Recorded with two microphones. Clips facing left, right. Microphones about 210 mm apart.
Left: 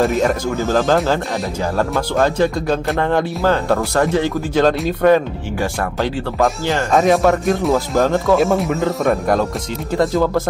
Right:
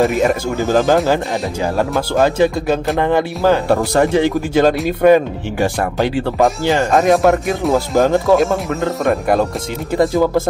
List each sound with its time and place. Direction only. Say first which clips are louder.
0.0 s speech: right 2 dB; centre (ahead or behind)
6.9 s speech: even; centre (ahead or behind)